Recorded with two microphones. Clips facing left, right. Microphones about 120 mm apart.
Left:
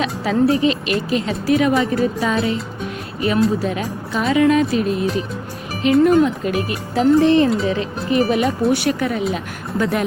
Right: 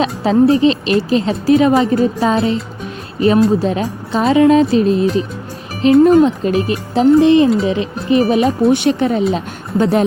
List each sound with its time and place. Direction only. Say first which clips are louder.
0.0 s speech: right 5 dB; 30° right (ahead or behind)